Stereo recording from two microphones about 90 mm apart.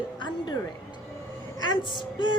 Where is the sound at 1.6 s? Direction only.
60° left (ahead or behind).